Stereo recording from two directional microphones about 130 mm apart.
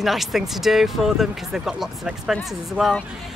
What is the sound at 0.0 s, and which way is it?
Speech, centre (ahead or behind).